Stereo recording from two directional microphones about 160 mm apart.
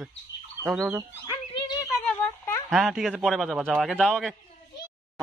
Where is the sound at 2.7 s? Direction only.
Centre (ahead or behind).